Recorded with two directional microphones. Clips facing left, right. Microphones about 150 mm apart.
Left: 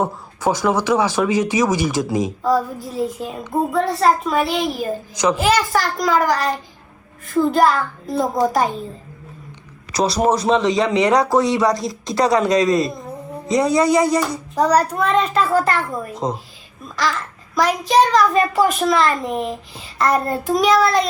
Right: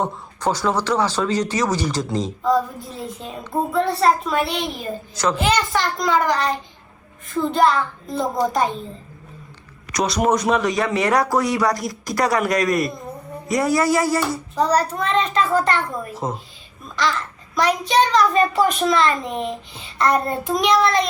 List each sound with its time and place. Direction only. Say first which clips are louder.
0.0 s a child's voice: left 2 dB; 10° left (ahead or behind)
5.1 s speech: left 3 dB; 15° left (ahead or behind)
5.4 s a child's voice: left 1 dB; centre (ahead or behind)
9.9 s speech: left 2 dB; 30° left (ahead or behind); by 15.8 s 5° left (ahead or behind)
16.1 s speech: left 4 dB; 20° left (ahead or behind)
16.9 s a child's voice: even; centre (ahead or behind)